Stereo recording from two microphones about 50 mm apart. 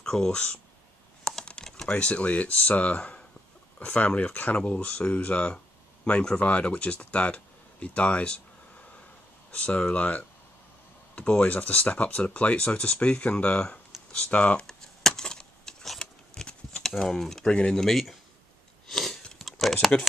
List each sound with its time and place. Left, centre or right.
0.0 s speech: centre
1.2 s computer keyboard: centre
1.9 s speech: left
14.7 s a sound: centre
16.8 s speech: centre
17.5 s speech: centre
17.7 s speech: centre
18.9 s chewing: centre
19.3 s a sound: centre